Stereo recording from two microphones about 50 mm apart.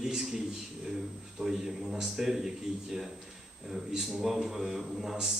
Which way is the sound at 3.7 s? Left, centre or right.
Centre.